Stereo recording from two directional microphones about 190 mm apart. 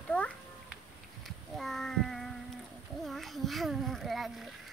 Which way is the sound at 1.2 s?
Centre (ahead or behind).